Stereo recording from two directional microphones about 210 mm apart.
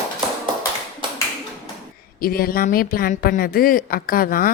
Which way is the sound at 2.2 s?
45° left (ahead or behind).